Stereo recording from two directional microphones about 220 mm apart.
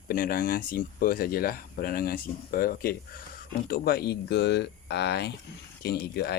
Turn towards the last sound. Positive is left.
turn(degrees=45)  # may be behind; listen again after turning